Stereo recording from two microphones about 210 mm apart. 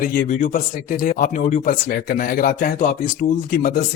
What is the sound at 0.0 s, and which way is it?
Speech, 40° left (ahead or behind).